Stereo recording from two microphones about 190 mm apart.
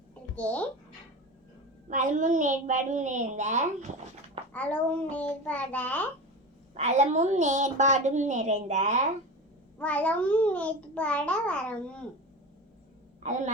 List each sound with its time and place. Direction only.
0.1 s a sound: 5° left (ahead or behind)
1.9 s a woman's voice: 40° right (ahead or behind)
4.5 s a child's voice: 5° left (ahead or behind)
6.7 s a woman's voice: 35° right (ahead or behind)
9.7 s a child's voice: 10° left (ahead or behind)